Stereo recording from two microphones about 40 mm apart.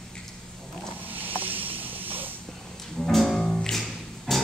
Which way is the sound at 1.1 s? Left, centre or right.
Right.